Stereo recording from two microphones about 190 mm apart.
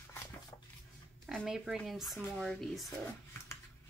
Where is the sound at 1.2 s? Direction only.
Centre (ahead or behind).